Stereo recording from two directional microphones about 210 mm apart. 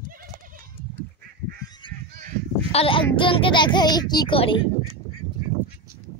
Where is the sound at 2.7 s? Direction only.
25° left (ahead or behind).